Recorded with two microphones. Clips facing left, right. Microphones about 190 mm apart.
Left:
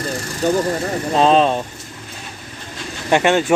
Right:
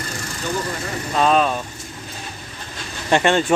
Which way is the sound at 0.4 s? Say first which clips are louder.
Left 9 dB; 40° left (ahead or behind).